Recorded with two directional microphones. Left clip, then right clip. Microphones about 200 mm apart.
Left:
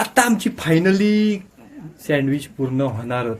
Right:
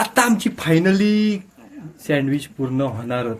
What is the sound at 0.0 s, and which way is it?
A man's voice, centre (ahead or behind).